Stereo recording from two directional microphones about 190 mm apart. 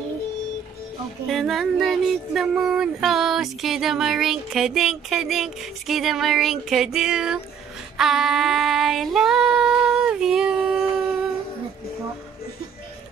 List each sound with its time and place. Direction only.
1.2 s speech: centre (ahead or behind)
8.0 s female singing: centre (ahead or behind)